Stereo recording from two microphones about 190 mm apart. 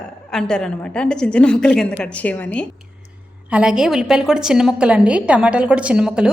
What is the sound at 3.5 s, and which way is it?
A woman's voice, 5° right (ahead or behind).